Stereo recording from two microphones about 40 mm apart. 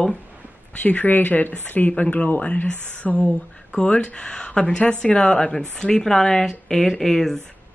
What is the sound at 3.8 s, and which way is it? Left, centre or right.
A woman's voice, left.